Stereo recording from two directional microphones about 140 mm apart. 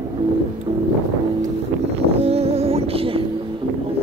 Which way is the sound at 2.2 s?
45° right (ahead or behind).